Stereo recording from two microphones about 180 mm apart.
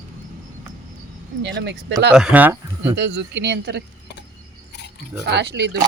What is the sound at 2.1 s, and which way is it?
Speech, 5° right (ahead or behind).